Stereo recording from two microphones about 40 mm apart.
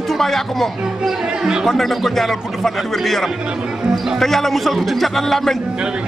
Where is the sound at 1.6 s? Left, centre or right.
Centre.